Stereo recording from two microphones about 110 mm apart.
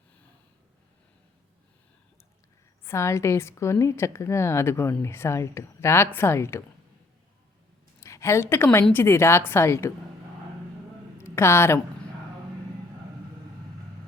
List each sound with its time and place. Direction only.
2.8 s a woman's voice: 25° left (ahead or behind)
8.0 s a woman's voice: 25° left (ahead or behind)
11.2 s a woman's voice: 25° left (ahead or behind)